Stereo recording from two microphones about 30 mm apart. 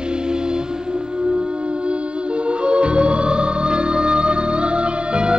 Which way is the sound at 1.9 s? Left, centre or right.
Right.